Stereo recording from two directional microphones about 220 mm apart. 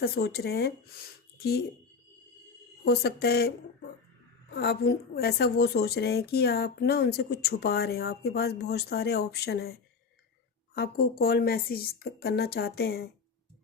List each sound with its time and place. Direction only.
0.0 s a woman's voice: 45° left (ahead or behind)
2.8 s a woman's voice: 45° left (ahead or behind)
10.8 s a woman's voice: 45° left (ahead or behind)